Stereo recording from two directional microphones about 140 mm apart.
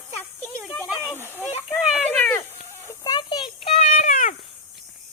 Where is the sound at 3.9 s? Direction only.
65° left (ahead or behind).